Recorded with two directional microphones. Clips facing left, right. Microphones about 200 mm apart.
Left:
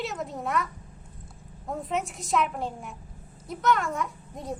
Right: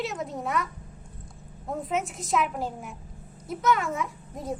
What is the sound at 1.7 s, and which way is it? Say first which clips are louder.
A woman's voice: right 1 dB; centre (ahead or behind).